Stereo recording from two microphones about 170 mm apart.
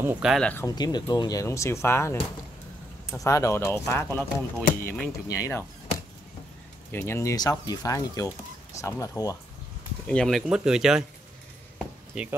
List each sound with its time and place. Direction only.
0.0 s speech: 10° right (ahead or behind)
0.3 s speech: 5° left (ahead or behind)
0.7 s speech: 25° left (ahead or behind)
3.2 s speech: 20° left (ahead or behind)
6.9 s speech: 15° left (ahead or behind)
10.0 s speech: 5° left (ahead or behind)